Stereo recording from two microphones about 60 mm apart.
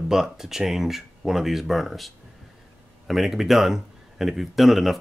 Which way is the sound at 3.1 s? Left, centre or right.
Centre.